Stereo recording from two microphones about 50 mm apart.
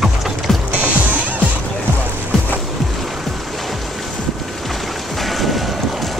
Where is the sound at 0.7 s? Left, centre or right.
Right.